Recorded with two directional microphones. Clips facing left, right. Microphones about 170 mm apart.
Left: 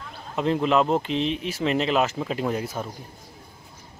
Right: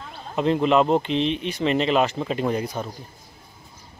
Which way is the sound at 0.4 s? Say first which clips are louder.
Right 2 dB; centre (ahead or behind).